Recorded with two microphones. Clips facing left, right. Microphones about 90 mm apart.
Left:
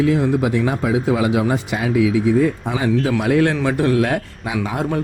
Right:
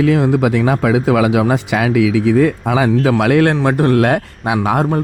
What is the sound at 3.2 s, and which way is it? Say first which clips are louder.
Speech: right 4 dB; 65° right (ahead or behind).